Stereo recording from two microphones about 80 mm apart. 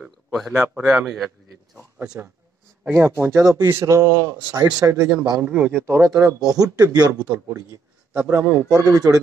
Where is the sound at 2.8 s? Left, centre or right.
Right.